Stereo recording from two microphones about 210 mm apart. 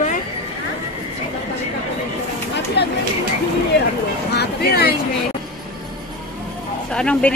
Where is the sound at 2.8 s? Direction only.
55° left (ahead or behind).